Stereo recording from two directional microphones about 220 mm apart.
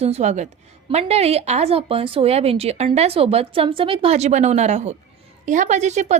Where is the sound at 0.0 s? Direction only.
30° right (ahead or behind).